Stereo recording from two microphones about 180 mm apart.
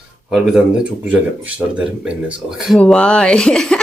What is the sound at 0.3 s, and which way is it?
Speech, centre (ahead or behind).